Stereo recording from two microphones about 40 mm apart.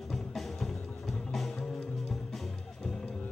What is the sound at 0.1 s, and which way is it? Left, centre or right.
Music, centre.